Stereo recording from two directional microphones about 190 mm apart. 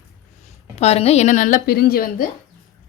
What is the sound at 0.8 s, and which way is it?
Speech, 35° left (ahead or behind).